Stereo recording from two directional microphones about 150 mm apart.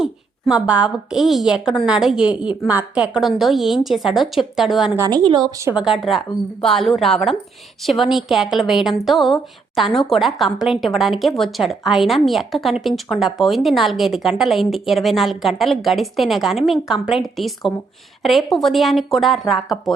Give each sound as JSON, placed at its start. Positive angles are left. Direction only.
{"t": 0.0, "sound": "a woman's voice", "side_deg": -5}
{"t": 4.9, "sound": "a woman's voice", "side_deg": -25}
{"t": 5.7, "sound": "a woman's voice", "side_deg": -5}